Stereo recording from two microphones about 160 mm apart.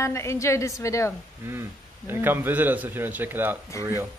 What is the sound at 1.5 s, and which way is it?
A man's voice, 15° right (ahead or behind).